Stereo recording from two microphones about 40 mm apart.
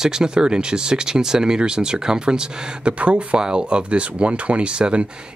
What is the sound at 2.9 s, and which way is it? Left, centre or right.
Speech, right.